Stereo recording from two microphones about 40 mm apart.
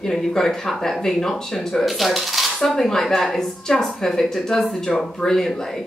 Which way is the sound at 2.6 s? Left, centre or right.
Centre.